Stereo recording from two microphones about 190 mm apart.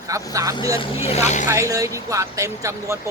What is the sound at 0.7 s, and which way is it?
Speech, 35° left (ahead or behind).